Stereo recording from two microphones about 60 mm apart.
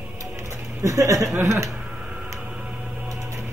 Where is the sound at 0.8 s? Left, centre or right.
Right.